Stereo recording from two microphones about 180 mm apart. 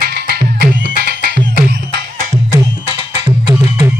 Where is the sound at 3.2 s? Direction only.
25° right (ahead or behind).